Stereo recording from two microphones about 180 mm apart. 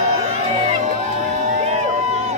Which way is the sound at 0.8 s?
40° right (ahead or behind).